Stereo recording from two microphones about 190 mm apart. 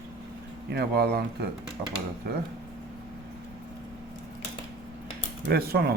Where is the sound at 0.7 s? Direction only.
60° right (ahead or behind).